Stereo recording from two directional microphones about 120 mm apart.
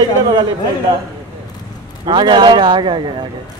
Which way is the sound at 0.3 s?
40° right (ahead or behind).